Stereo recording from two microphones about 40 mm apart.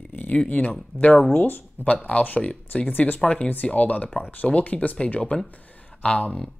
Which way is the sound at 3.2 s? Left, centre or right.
Left.